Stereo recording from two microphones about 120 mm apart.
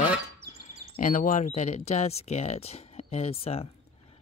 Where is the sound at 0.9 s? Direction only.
90° left; by 3.6 s 55° left (ahead or behind).